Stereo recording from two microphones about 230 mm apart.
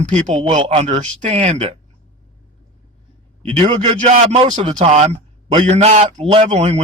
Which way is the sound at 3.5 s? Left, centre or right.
Right.